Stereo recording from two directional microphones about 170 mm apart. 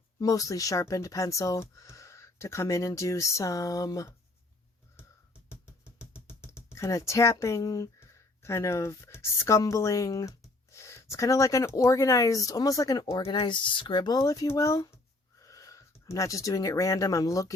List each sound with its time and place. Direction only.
0.2 s speech: 20° left (ahead or behind)
6.1 s speech: 15° left (ahead or behind)